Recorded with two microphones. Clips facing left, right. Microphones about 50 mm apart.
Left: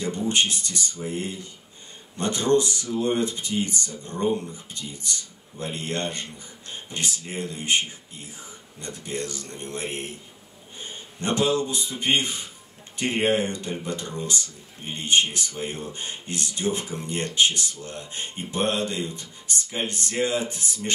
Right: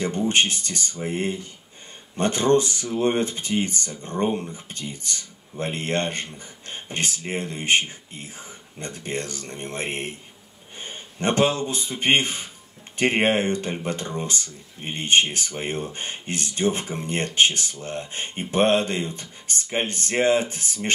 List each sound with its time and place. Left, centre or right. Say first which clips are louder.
0.3 s a man's voice: right 2 dB; right